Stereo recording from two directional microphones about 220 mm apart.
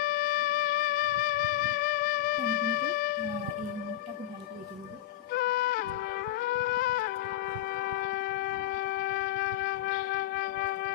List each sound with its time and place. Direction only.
0.0 s music: 40° left (ahead or behind)
5.3 s music: 45° left (ahead or behind)